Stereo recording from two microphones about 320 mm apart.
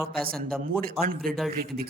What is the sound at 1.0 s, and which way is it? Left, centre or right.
Speech, right.